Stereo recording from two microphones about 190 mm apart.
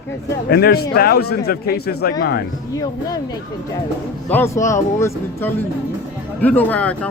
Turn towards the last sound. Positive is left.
turn(degrees=5)  # may be behind; listen again after turning